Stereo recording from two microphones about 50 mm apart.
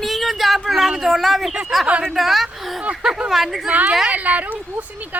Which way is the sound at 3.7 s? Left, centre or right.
Right.